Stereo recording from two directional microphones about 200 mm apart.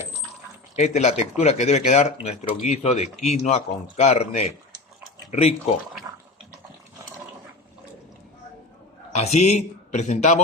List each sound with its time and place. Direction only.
0.8 s speech: 35° left (ahead or behind)
9.1 s speech: 35° left (ahead or behind)